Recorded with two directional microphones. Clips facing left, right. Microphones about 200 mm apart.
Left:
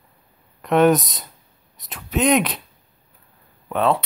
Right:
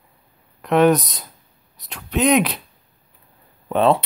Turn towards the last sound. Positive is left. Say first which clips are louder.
# right 3 dB
turn(degrees=-25)  # may be behind; listen again after turning